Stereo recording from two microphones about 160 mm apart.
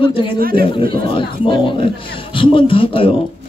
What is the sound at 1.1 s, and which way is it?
A man's voice, 30° left (ahead or behind).